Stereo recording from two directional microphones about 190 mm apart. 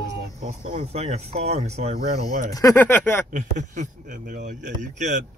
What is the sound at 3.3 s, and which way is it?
Speech, 40° right (ahead or behind).